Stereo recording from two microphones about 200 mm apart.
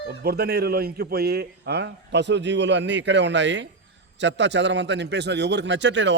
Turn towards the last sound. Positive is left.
turn(degrees=-65)  # may be behind; listen again after turning